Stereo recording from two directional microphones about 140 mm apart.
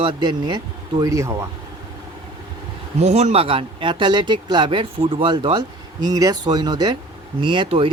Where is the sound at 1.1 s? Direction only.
20° right (ahead or behind).